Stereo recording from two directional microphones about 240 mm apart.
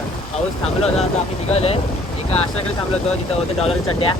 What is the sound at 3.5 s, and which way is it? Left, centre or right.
Speech, left.